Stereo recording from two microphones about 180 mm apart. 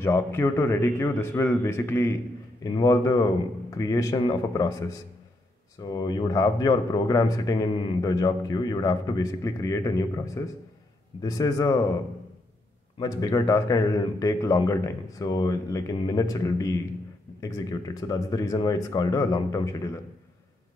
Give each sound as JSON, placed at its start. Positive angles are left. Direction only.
{"t": 0.0, "sound": "a man's voice", "side_deg": 10}
{"t": 5.8, "sound": "speech", "side_deg": 20}
{"t": 13.0, "sound": "speech", "side_deg": 20}